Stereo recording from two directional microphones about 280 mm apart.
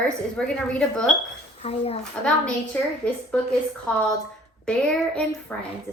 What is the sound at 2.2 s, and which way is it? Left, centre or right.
A woman's voice, centre.